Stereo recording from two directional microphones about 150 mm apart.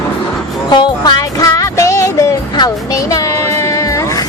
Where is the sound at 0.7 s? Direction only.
25° left (ahead or behind).